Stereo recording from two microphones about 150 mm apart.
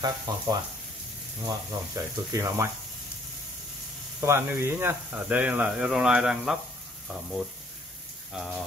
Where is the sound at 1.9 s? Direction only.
20° right (ahead or behind).